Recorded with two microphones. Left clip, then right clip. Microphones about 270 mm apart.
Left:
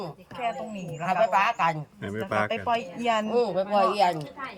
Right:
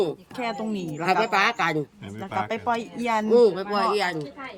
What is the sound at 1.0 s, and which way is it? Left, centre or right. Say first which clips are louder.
Speech: right 1 dB; right.